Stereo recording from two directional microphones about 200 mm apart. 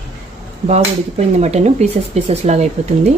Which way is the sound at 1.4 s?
35° right (ahead or behind).